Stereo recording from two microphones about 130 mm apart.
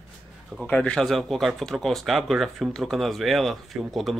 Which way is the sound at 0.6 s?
10° left (ahead or behind).